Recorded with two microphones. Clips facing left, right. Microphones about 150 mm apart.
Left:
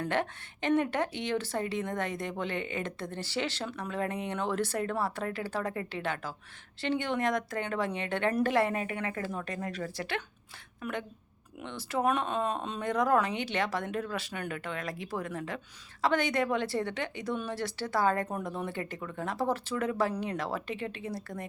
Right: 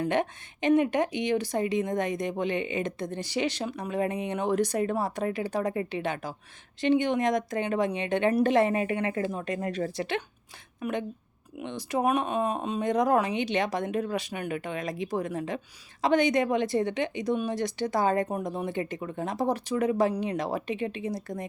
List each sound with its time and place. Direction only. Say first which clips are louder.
0.0 s a woman's voice: right 4 dB; 15° right (ahead or behind)